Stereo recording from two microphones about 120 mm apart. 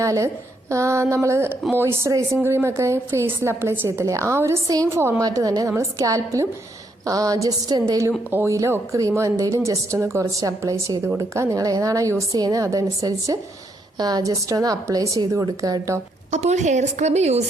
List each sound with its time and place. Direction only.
0.0 s a woman's voice: 25° right (ahead or behind)
16.3 s a woman's voice: 75° right (ahead or behind)